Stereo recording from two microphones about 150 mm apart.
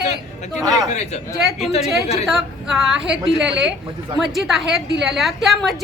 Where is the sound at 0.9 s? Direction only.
50° left (ahead or behind).